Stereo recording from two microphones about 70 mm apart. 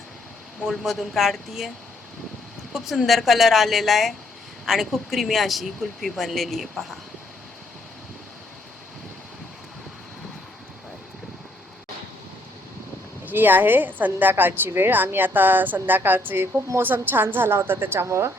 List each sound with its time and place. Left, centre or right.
0.6 s speech: centre
2.7 s speech: centre
13.2 s a woman's voice: right